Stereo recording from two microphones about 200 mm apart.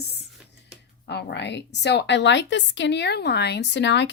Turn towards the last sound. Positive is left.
turn(degrees=60)  # may be behind; listen again after turning